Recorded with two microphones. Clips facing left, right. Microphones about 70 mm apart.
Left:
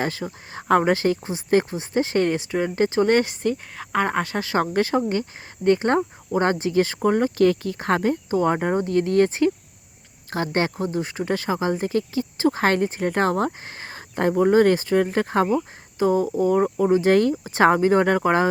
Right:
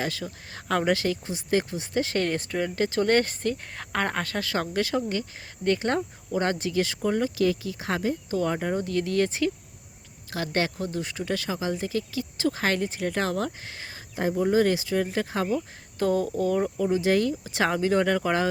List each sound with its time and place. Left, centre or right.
0.0 s speech: left
2.3 s speech: centre
2.6 s speech: left
4.6 s speech: left
8.3 s speech: left
14.2 s speech: left
16.0 s speech: centre; by 18.4 s left